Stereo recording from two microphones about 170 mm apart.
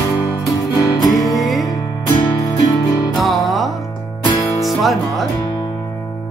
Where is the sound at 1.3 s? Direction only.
Centre (ahead or behind).